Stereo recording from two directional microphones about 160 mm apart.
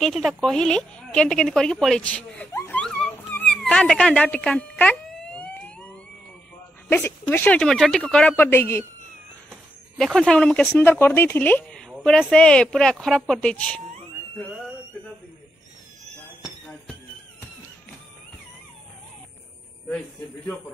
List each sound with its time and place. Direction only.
0.0 s a woman's voice: centre (ahead or behind)
2.5 s a sound: 15° left (ahead or behind)
2.8 s dog: 5° left (ahead or behind)
6.9 s speech: 10° left (ahead or behind)
9.9 s a woman's voice: centre (ahead or behind)